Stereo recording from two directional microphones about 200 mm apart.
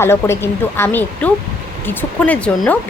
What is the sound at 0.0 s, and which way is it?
A woman's voice, 10° left (ahead or behind).